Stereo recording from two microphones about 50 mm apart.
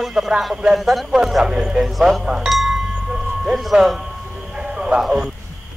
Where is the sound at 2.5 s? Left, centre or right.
Centre.